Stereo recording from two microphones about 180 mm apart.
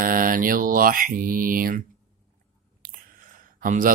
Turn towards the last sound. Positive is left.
turn(degrees=-50)  # may be behind; listen again after turning